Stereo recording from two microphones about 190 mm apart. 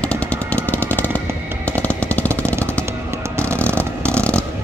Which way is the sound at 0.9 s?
10° left (ahead or behind).